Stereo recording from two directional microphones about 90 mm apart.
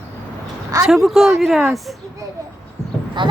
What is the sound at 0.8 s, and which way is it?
A woman's voice, 5° right (ahead or behind).